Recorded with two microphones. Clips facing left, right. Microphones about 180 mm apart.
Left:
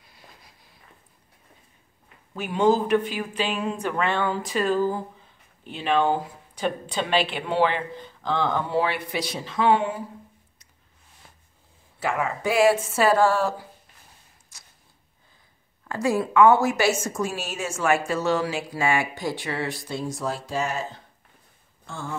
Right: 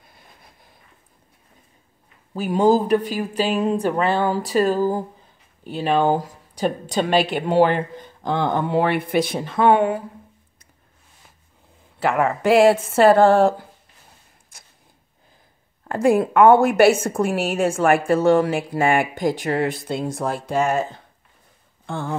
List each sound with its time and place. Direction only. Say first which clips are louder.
0.0 s a sound: right 1 dB; 50° right (ahead or behind)
2.3 s speech: right 4 dB; 35° right (ahead or behind); by 10.0 s 60° right (ahead or behind)
12.0 s a woman's voice: right 6 dB; 60° right (ahead or behind)
14.5 s a sound: right 4 dB; 55° right (ahead or behind)
15.9 s a woman's voice: right 6 dB; 55° right (ahead or behind)
19.8 s a woman's voice: right 5 dB; 60° right (ahead or behind)
21.8 s speech: right 7 dB; 60° right (ahead or behind)